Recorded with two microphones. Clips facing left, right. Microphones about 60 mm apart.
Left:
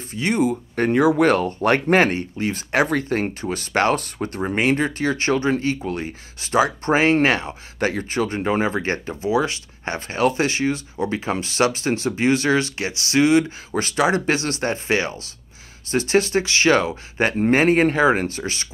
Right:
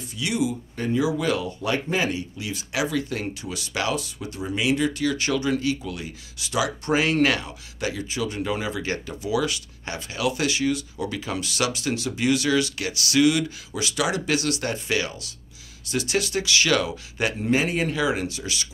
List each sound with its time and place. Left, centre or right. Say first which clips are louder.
0.1 s speech: left 5 dB; left